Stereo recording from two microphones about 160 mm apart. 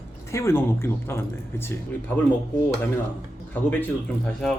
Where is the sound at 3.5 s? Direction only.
10° left (ahead or behind).